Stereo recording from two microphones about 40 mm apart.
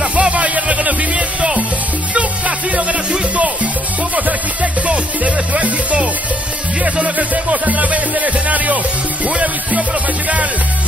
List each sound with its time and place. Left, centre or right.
0.0 s music: right
4.8 s music: right